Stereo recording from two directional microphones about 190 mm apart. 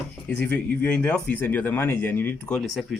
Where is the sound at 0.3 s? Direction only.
10° left (ahead or behind).